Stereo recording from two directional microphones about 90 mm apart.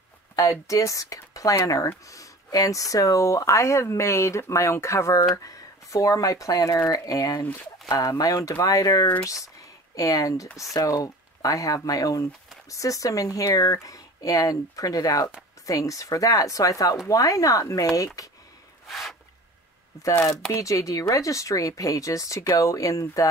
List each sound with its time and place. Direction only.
0.4 s speech: 35° left (ahead or behind)
18.9 s a sound: centre (ahead or behind)
20.0 s speech: 35° left (ahead or behind)